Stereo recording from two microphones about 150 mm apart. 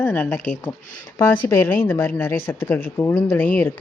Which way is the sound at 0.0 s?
10° left (ahead or behind).